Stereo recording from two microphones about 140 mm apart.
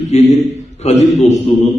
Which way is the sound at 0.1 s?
55° left (ahead or behind).